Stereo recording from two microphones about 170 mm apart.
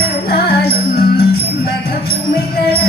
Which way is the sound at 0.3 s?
65° left (ahead or behind).